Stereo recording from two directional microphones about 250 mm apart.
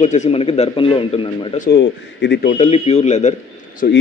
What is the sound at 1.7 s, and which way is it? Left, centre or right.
Speech, left.